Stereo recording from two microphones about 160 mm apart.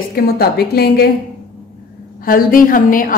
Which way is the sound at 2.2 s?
60° left (ahead or behind).